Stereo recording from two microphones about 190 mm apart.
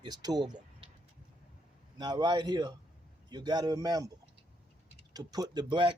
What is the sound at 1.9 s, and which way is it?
A man's voice, 20° right (ahead or behind).